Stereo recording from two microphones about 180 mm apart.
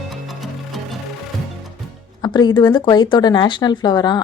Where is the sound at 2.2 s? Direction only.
25° left (ahead or behind).